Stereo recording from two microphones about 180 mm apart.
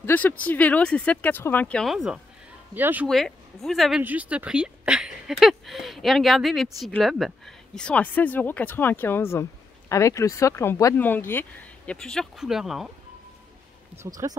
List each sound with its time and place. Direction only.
0.0 s speech: 10° left (ahead or behind); by 3.1 s 10° right (ahead or behind)
3.1 s speech: centre (ahead or behind)
14.2 s speech: 15° right (ahead or behind)